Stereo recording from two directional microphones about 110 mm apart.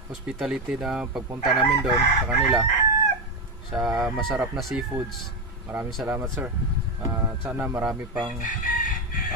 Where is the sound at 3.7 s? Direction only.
5° right (ahead or behind).